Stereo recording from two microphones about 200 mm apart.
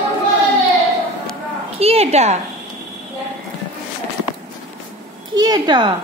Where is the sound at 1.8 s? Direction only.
30° right (ahead or behind).